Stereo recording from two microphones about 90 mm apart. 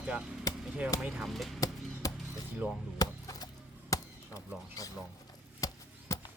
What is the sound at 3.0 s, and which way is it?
Chop, 45° left (ahead or behind).